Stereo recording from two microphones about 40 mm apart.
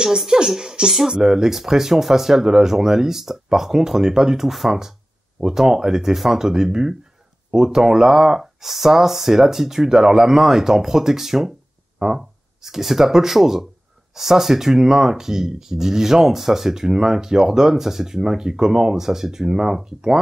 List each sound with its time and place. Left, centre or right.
0.3 s speech: centre